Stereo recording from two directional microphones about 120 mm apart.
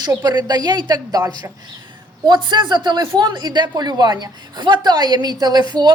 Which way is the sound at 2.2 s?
40° right (ahead or behind).